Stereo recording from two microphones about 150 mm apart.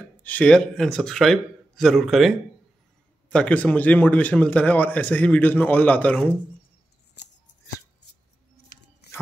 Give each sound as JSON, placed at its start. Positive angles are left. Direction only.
{"t": 0.2, "sound": "a man's voice", "side_deg": 10}
{"t": 8.5, "sound": "scissors", "side_deg": 90}